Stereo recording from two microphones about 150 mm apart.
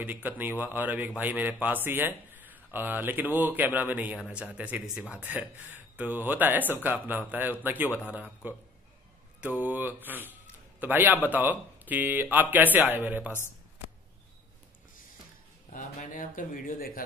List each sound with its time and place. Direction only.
0.0 s speech: 10° right (ahead or behind)
15.7 s speech: 55° left (ahead or behind)